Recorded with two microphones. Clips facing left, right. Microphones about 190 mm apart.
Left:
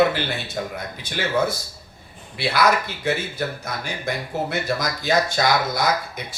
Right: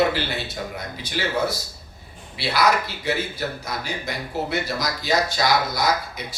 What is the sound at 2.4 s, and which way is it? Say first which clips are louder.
Speech: left 1 dB; 50° left (ahead or behind).